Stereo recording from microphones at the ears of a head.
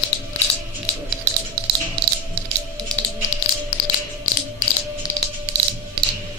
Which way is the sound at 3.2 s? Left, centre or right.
Left.